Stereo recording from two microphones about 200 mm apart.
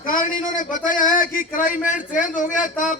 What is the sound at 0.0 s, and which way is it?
A man's voice, 45° left (ahead or behind).